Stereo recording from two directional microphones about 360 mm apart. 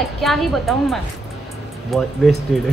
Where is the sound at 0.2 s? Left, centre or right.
Centre.